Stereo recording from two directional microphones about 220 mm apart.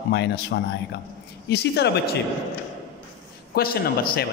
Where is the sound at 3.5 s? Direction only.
45° left (ahead or behind).